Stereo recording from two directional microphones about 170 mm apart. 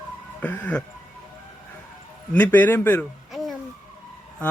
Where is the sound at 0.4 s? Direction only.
10° left (ahead or behind).